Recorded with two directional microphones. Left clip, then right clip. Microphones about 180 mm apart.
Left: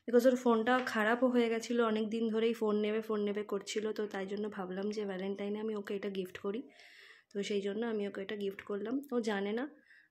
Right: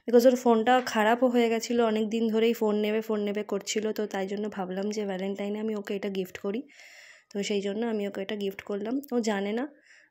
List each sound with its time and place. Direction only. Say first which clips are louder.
0.0 s speech: right 7 dB; 25° right (ahead or behind)